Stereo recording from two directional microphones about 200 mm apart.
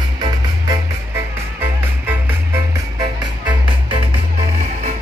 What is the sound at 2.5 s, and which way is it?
Music, 20° right (ahead or behind).